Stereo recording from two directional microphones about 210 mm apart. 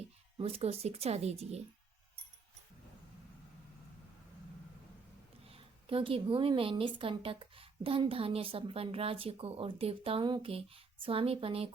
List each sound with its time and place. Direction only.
0.3 s a woman's voice: 25° right (ahead or behind)
5.5 s a woman's voice: 25° right (ahead or behind)